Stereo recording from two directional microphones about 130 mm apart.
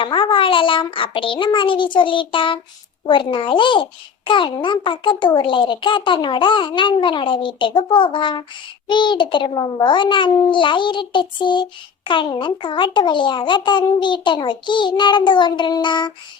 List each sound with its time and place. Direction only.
0.0 s a child's voice: 40° left (ahead or behind)